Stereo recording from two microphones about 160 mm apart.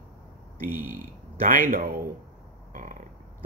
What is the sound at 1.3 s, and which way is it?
Speech, 55° right (ahead or behind).